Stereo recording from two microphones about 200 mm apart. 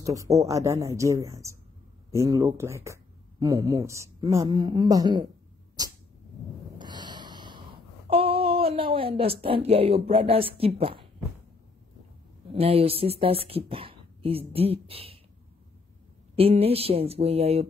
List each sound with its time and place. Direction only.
0.0 s speech: 15° right (ahead or behind)
5.8 s dog: 20° right (ahead or behind)
6.8 s snort: 20° right (ahead or behind)
8.1 s speech: 30° right (ahead or behind)
12.5 s speech: 30° right (ahead or behind)
16.3 s speech: 30° right (ahead or behind)